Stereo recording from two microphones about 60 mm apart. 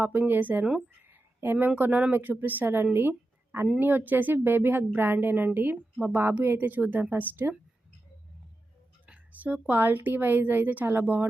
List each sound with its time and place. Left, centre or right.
0.0 s a woman's voice: right
2.9 s a sound: right
3.8 s a woman's voice: right
9.3 s a woman's voice: right